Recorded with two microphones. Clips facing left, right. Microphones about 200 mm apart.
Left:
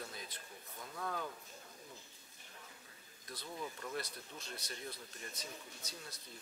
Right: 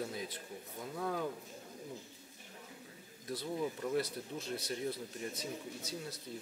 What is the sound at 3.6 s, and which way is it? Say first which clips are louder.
Speech: right 7 dB; 20° right (ahead or behind).